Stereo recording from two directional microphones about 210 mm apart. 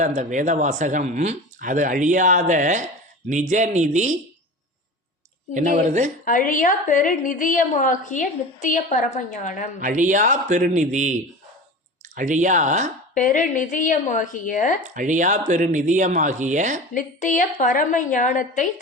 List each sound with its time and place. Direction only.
0.0 s speech: 35° right (ahead or behind)
5.5 s speech: 35° right (ahead or behind)
6.2 s a woman's voice: 40° left (ahead or behind)
9.8 s speech: 35° right (ahead or behind)
13.1 s a woman's voice: 35° left (ahead or behind)
14.8 s speech: 35° right (ahead or behind)
16.9 s a woman's voice: 40° left (ahead or behind)